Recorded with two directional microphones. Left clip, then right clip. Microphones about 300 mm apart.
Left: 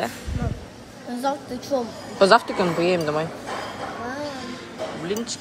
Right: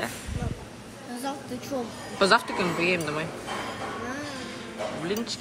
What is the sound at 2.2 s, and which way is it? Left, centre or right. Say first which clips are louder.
A woman's voice: left 6 dB; centre.